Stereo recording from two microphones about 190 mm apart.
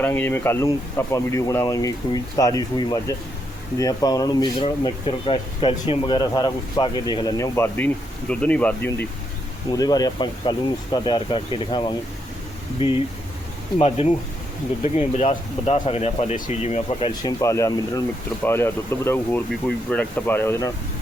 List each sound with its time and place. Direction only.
0.0 s speech: 10° left (ahead or behind)
9.7 s speech: 20° left (ahead or behind)
13.7 s speech: 30° left (ahead or behind)
17.1 s speech: 20° left (ahead or behind)